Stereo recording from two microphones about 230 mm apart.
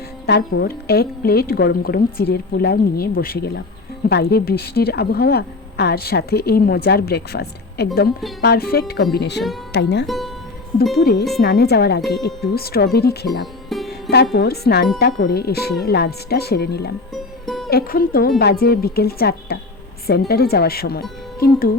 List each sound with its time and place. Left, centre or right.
0.6 s a woman's voice: left
10.1 s speech: centre
10.9 s a woman's voice: left
13.4 s music: centre
14.3 s a woman's voice: left
17.4 s music: centre
17.7 s a woman's voice: left